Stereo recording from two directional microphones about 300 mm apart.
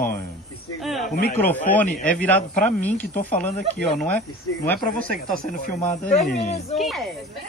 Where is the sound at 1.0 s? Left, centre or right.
Left.